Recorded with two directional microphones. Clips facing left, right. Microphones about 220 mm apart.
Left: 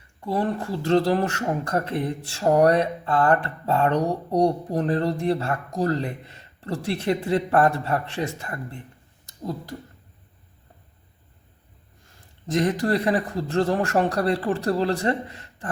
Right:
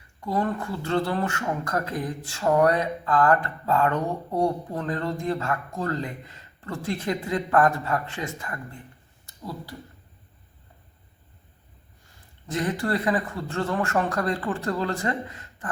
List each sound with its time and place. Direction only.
0.3 s speech: 30° left (ahead or behind)
12.5 s speech: 40° left (ahead or behind)